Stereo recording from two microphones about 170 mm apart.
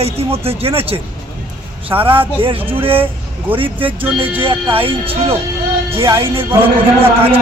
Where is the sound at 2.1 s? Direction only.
30° right (ahead or behind).